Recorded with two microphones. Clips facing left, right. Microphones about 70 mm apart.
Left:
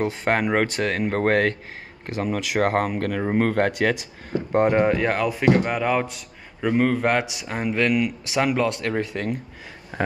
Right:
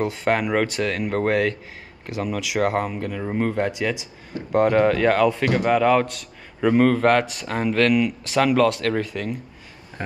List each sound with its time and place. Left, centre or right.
0.0 s speech: left
4.5 s a man's voice: left
9.0 s speech: left
9.9 s speech: left